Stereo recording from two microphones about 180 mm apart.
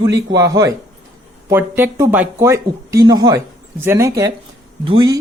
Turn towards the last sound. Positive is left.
turn(degrees=-25)  # may be behind; listen again after turning